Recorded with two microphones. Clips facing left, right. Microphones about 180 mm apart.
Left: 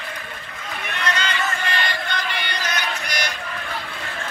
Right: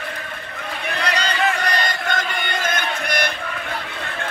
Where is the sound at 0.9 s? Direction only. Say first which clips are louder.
Right 2 dB; 35° right (ahead or behind); by 3.3 s 55° right (ahead or behind).